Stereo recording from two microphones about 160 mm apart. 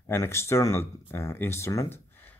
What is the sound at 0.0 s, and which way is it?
Speech, 15° left (ahead or behind).